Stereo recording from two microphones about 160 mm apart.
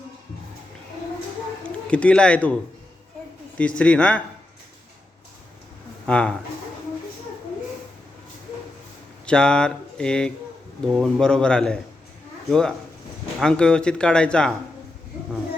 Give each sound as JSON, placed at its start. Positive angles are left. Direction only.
{"t": 1.9, "sound": "speech", "side_deg": 5}
{"t": 3.6, "sound": "speech", "side_deg": 5}
{"t": 6.1, "sound": "speech", "side_deg": 5}
{"t": 9.2, "sound": "speech", "side_deg": 5}